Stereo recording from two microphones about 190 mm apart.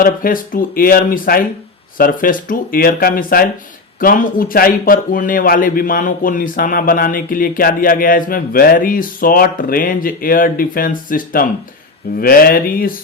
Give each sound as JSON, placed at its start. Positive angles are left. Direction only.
{"t": 0.0, "sound": "a man's voice", "side_deg": 45}